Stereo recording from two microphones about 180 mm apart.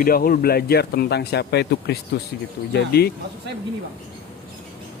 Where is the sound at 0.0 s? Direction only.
55° left (ahead or behind).